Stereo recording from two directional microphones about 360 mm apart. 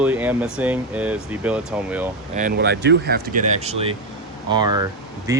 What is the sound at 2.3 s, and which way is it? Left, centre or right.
Speech, right.